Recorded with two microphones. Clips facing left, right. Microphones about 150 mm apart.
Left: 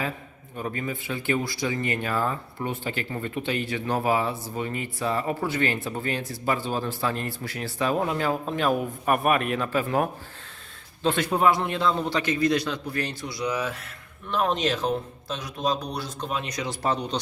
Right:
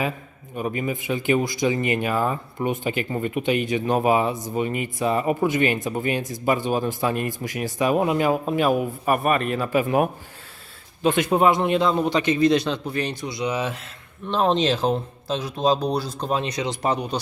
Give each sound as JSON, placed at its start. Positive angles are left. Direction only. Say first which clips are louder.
{"t": 0.5, "sound": "speech", "louder": "right 5 dB", "side_deg": -15}
{"t": 9.6, "sound": "a man's voice", "louder": "right 4 dB", "side_deg": -15}